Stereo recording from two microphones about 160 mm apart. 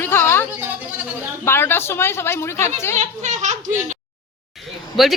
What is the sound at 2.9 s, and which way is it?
Speech, 45° right (ahead or behind).